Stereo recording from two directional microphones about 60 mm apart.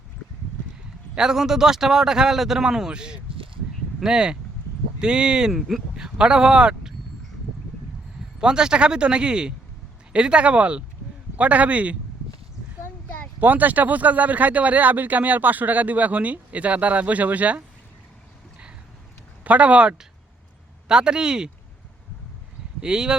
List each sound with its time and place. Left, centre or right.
1.1 s speech: centre
6.1 s speech: centre
8.4 s speech: centre
13.4 s speech: right
19.5 s speech: right
22.8 s speech: centre